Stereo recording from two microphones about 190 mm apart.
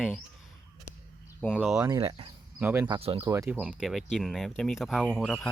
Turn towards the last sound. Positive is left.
turn(degrees=5)  # may be behind; listen again after turning